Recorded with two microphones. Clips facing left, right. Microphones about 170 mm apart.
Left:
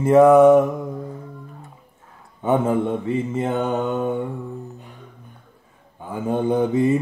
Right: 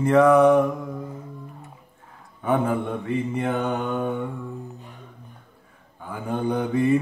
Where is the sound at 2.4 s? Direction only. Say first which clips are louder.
Left 4 dB; 25° left (ahead or behind).